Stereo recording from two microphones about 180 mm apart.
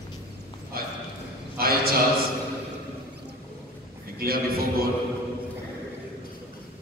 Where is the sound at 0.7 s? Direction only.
55° right (ahead or behind).